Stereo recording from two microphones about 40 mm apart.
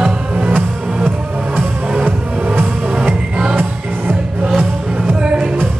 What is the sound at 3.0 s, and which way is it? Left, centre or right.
Music, right.